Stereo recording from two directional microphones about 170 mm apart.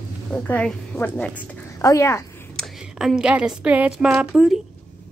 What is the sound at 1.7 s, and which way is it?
Speech, 20° left (ahead or behind).